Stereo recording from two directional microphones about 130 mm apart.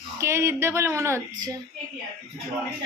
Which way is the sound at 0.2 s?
20° right (ahead or behind).